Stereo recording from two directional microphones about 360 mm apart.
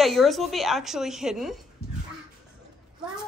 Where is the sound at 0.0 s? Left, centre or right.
Centre.